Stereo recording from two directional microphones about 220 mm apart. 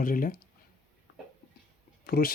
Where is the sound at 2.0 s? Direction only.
40° left (ahead or behind).